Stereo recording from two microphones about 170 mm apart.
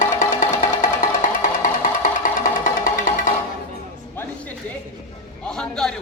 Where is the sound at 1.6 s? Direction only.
50° left (ahead or behind).